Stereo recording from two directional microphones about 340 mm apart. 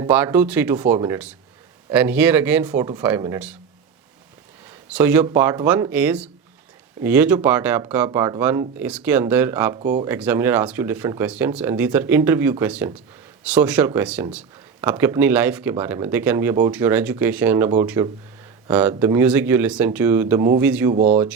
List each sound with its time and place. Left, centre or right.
0.0 s speech: centre
4.9 s speech: centre
20.9 s speech: centre